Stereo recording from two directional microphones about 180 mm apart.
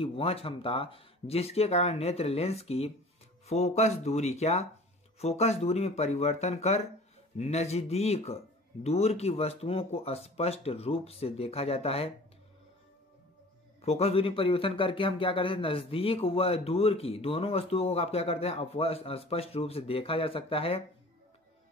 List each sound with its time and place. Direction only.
0.0 s speech: 30° left (ahead or behind)
13.7 s speech: 35° left (ahead or behind)